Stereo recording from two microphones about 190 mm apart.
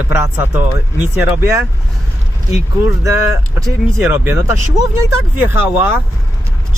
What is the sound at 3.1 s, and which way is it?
Speech, 15° right (ahead or behind).